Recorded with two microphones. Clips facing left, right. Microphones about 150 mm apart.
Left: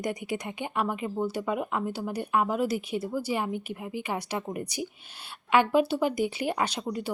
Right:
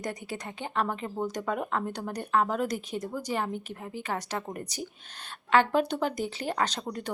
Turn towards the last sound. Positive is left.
turn(degrees=5)  # may be behind; listen again after turning